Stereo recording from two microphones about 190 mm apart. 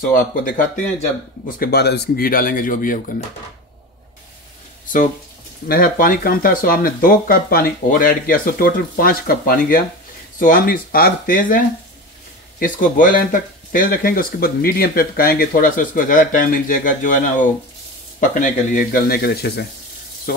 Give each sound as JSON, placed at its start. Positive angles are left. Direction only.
{"t": 0.1, "sound": "speech", "side_deg": 45}
{"t": 1.6, "sound": "speech", "side_deg": 55}
{"t": 5.7, "sound": "speech", "side_deg": 50}